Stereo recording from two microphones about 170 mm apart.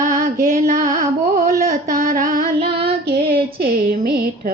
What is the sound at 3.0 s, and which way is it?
Child singing, 70° right (ahead or behind).